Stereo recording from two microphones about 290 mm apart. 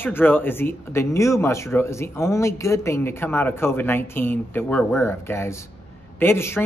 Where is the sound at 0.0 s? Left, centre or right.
Centre.